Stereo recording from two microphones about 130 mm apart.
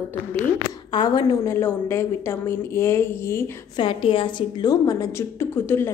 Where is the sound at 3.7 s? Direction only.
40° left (ahead or behind).